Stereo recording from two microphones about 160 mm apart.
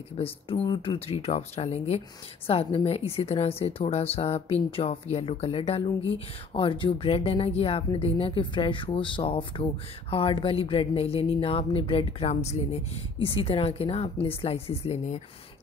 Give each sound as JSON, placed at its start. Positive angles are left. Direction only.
{"t": 0.2, "sound": "speech", "side_deg": 35}